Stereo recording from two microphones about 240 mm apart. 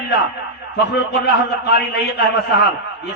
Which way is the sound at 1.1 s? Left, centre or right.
Left.